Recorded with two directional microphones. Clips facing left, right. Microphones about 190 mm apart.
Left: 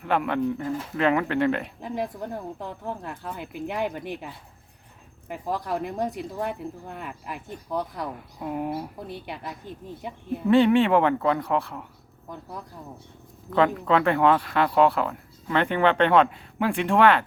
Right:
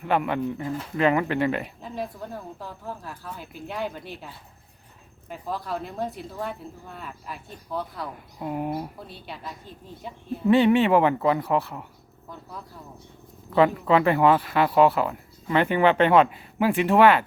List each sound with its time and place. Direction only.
0.0 s speech: centre (ahead or behind)
1.8 s speech: 15° left (ahead or behind)
5.3 s speech: 15° left (ahead or behind)
8.4 s speech: centre (ahead or behind)
9.0 s speech: 15° left (ahead or behind)
10.5 s speech: centre (ahead or behind)
13.5 s speech: 5° right (ahead or behind)